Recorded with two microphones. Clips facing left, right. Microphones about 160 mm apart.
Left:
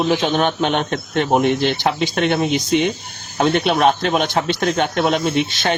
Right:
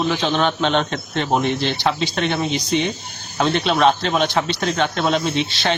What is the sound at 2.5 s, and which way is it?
Speech, 50° left (ahead or behind).